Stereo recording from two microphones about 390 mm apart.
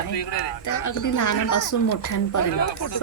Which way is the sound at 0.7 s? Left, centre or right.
Left.